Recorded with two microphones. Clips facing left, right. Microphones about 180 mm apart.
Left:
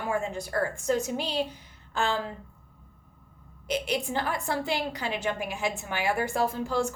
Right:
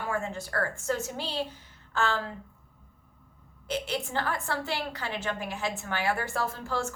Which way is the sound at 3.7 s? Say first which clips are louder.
Left 3 dB; 15° left (ahead or behind).